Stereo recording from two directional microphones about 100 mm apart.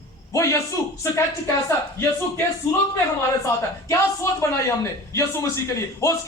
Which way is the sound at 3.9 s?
30° left (ahead or behind).